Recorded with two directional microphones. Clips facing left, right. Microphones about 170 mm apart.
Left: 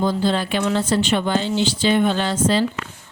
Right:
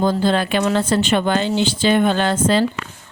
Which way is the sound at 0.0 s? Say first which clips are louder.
Right 3 dB; 50° right (ahead or behind).